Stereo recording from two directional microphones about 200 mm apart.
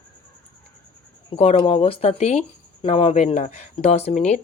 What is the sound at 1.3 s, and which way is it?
Speech, 30° left (ahead or behind).